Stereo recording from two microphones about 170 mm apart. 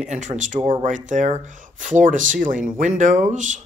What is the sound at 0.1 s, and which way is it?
Speech, 45° right (ahead or behind).